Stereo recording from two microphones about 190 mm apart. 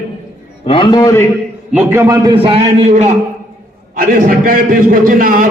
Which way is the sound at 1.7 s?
10° right (ahead or behind).